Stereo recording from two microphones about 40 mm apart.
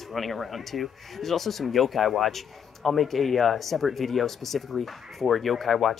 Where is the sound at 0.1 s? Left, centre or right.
Centre.